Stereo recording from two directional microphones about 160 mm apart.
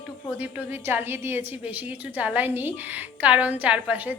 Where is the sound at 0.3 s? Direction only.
10° right (ahead or behind).